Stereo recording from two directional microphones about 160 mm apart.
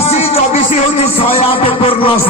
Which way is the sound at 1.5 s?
35° left (ahead or behind).